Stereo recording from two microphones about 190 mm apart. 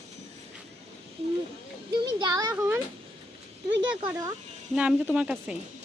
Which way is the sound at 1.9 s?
20° right (ahead or behind).